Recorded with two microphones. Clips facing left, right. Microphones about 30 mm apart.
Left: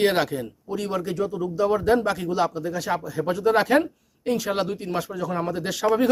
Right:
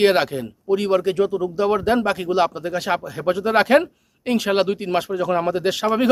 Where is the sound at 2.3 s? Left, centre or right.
Right.